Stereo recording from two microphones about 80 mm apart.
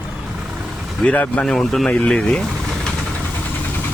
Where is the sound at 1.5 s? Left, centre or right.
Centre.